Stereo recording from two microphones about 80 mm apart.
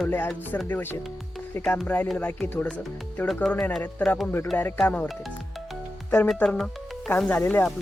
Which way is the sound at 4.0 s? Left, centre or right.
Centre.